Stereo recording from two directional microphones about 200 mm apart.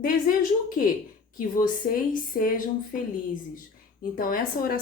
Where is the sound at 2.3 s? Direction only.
45° left (ahead or behind).